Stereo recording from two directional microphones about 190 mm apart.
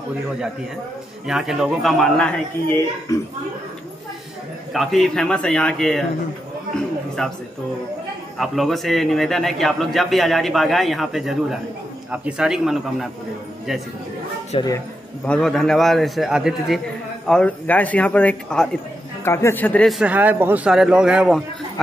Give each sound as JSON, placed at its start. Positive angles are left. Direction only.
{"t": 1.2, "sound": "a man's voice", "side_deg": 0}
{"t": 3.1, "sound": "a man's voice", "side_deg": 15}
{"t": 4.7, "sound": "a man's voice", "side_deg": 0}
{"t": 7.2, "sound": "a man's voice", "side_deg": 5}
{"t": 8.4, "sound": "a man's voice", "side_deg": 0}
{"t": 14.5, "sound": "speech", "side_deg": 30}
{"t": 15.2, "sound": "a man's voice", "side_deg": 5}